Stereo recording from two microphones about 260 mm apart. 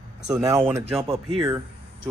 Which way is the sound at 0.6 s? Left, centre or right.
Centre.